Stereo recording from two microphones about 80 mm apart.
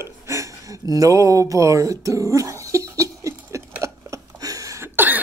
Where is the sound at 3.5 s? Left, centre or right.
Right.